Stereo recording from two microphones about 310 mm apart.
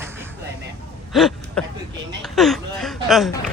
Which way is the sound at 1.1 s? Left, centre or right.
Centre.